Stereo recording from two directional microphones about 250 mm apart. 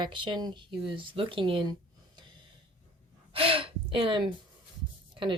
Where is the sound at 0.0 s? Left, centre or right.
Centre.